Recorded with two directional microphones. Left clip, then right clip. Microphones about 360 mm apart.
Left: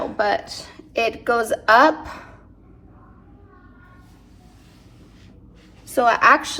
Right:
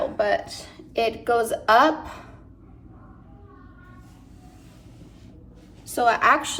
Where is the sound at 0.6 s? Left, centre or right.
Left.